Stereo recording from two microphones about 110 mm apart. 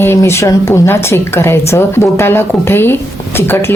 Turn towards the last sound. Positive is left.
turn(degrees=20)  # may be behind; listen again after turning